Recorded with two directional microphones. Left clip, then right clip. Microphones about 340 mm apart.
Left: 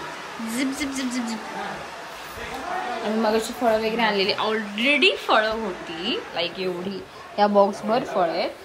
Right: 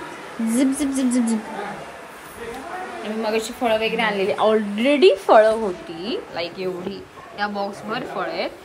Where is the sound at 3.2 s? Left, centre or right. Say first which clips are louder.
Even; centre.